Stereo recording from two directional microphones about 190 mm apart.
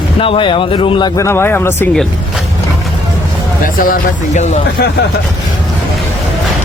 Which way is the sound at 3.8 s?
45° left (ahead or behind).